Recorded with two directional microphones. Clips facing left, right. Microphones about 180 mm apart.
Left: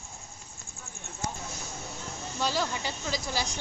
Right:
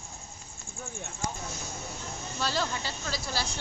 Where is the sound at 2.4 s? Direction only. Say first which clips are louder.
Left 1 dB; 15° left (ahead or behind).